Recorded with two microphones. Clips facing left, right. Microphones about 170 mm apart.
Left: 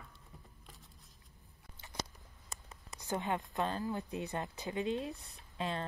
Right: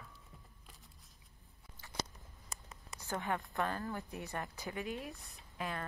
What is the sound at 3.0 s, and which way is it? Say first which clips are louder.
A woman's voice: left 2 dB; 20° left (ahead or behind).